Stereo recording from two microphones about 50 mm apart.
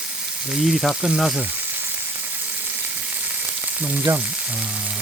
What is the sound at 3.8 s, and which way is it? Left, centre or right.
Frying, right.